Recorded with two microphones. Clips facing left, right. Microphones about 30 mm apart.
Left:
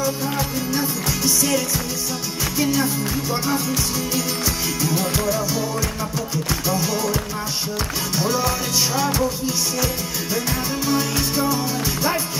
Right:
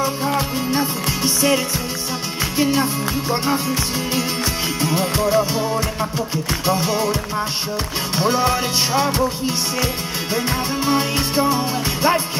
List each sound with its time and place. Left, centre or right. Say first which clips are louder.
0.0 s music: right 3 dB; right
8.2 s music: right 5 dB; right
10.9 s music: right 2 dB; right